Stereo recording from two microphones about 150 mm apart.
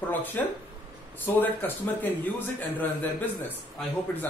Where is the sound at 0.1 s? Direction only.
10° left (ahead or behind).